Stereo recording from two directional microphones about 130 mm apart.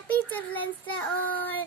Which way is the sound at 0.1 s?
10° left (ahead or behind).